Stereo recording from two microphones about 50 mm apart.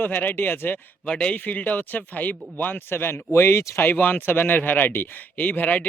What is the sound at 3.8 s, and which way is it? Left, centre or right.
Speech, left.